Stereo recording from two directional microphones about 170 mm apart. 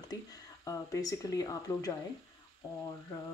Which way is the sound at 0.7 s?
20° left (ahead or behind).